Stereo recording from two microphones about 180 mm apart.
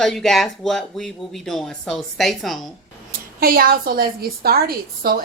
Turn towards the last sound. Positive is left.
turn(degrees=-55)  # may be behind; listen again after turning